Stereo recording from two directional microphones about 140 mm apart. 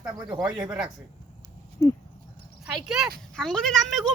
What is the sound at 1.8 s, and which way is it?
Dog, 20° left (ahead or behind).